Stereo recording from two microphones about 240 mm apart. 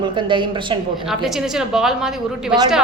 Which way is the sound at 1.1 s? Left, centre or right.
Centre.